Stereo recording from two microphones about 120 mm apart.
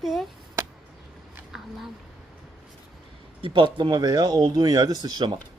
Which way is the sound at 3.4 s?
45° right (ahead or behind).